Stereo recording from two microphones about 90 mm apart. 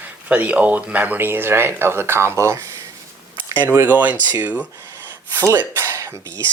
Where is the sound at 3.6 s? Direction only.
20° right (ahead or behind).